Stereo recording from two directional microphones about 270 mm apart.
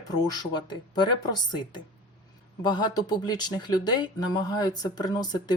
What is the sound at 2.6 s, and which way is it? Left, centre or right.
Speech, centre.